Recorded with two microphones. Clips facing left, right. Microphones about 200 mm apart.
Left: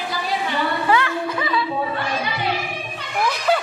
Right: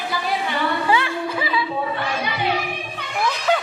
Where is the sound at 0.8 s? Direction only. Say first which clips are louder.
Left 2 dB; 25° right (ahead or behind).